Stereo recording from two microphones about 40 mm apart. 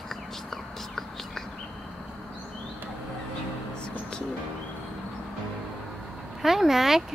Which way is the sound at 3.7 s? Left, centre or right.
Left.